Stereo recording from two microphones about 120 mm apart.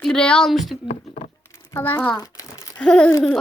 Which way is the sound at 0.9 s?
65° left (ahead or behind).